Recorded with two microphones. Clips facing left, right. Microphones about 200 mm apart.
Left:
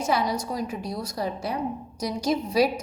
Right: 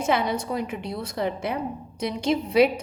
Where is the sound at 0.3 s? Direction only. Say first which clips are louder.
Right 2 dB; 60° right (ahead or behind).